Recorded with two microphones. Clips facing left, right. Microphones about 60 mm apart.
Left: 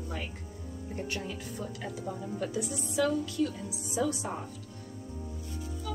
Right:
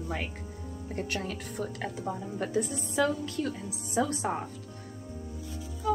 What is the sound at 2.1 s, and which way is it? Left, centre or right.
A woman's voice, right.